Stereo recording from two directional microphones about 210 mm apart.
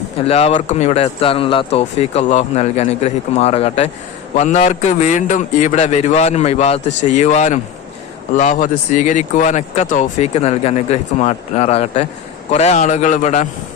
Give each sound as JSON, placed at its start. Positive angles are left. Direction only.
{"t": 0.3, "sound": "speech", "side_deg": 30}